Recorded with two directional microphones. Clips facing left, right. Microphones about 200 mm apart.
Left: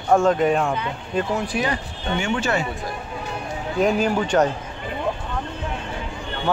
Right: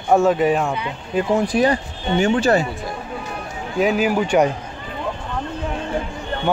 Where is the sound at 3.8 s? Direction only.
5° right (ahead or behind).